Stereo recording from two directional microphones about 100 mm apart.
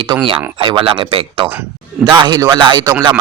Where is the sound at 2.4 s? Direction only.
45° right (ahead or behind).